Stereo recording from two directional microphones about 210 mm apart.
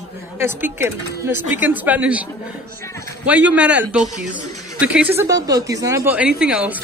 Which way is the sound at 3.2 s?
5° right (ahead or behind).